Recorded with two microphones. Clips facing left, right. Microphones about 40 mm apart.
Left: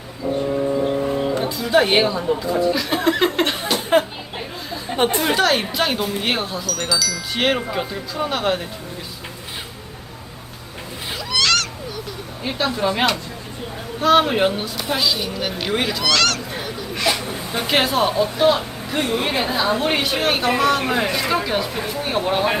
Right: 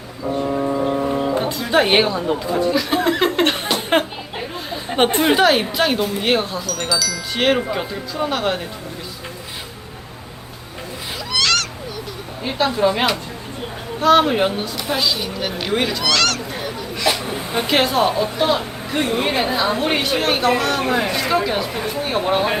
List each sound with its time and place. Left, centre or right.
1.7 s a woman's voice: right
2.7 s a woman's voice: centre
5.3 s a woman's voice: centre
11.3 s a sound: centre
12.4 s a woman's voice: centre
17.1 s a sound: centre
17.7 s a woman's voice: centre